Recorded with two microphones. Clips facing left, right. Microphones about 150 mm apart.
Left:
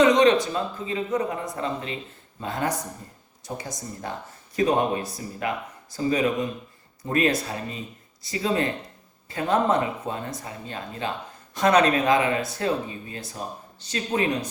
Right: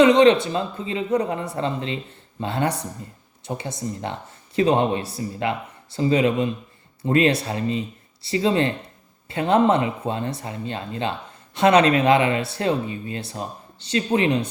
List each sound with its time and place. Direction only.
0.0 s speech: 30° right (ahead or behind)